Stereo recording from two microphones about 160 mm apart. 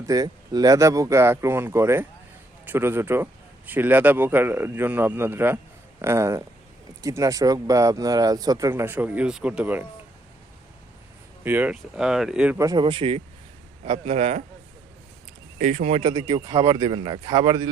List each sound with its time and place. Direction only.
0.0 s speech: 25° right (ahead or behind)
11.4 s speech: 10° right (ahead or behind)
12.5 s speech: 20° right (ahead or behind)
12.8 s a man's voice: 35° right (ahead or behind)
15.5 s speech: 50° right (ahead or behind)
16.0 s speech: 25° right (ahead or behind)